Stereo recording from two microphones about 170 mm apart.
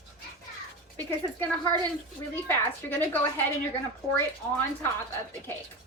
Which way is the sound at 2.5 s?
15° left (ahead or behind).